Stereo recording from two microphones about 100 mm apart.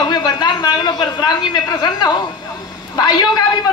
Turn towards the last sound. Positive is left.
turn(degrees=45)  # may be behind; listen again after turning